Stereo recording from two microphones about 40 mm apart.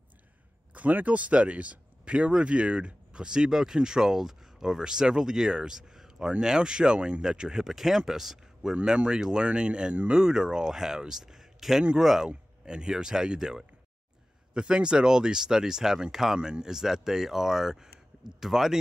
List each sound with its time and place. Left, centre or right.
0.7 s speech: right; by 7.7 s centre
7.7 s speech: centre
12.6 s speech: centre
16.3 s speech: right
16.6 s speech: centre